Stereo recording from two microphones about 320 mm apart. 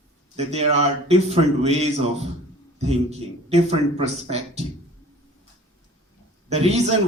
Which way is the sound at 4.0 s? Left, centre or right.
Centre.